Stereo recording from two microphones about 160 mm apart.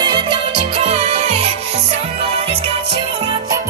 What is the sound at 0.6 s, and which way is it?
Music, 40° right (ahead or behind).